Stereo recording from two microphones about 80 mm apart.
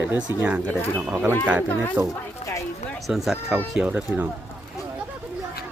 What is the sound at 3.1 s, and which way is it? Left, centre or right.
A man's voice, centre.